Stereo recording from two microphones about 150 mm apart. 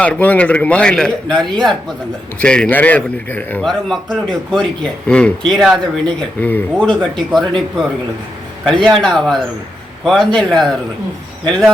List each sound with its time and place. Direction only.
0.0 s a man's voice: 10° left (ahead or behind)